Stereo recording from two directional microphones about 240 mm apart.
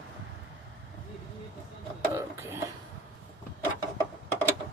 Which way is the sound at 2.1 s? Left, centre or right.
Centre.